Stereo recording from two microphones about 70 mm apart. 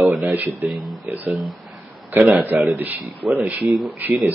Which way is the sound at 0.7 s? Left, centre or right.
Centre.